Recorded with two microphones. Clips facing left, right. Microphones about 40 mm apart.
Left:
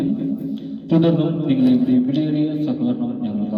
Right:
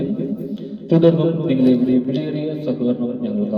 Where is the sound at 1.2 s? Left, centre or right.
Centre.